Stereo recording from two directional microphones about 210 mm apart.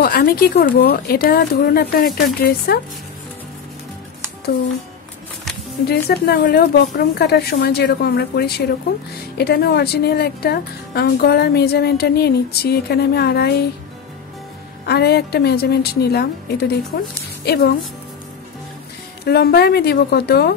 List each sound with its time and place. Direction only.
0.0 s speech: 45° left (ahead or behind)
5.9 s speech: 50° left (ahead or behind)
14.9 s speech: 50° left (ahead or behind)
19.2 s speech: 50° left (ahead or behind)